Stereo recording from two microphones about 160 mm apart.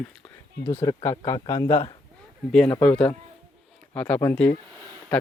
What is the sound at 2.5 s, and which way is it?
Speech, 5° left (ahead or behind).